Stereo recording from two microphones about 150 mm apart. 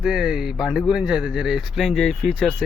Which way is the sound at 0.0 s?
Centre (ahead or behind).